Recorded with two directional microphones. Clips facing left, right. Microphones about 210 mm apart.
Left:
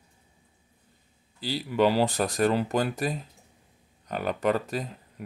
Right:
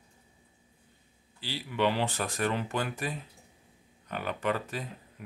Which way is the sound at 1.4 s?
40° left (ahead or behind).